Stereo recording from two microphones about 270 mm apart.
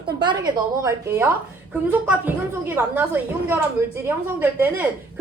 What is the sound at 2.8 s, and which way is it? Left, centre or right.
Speech, centre.